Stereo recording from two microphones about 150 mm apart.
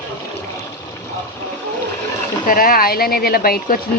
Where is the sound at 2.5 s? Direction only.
75° left (ahead or behind).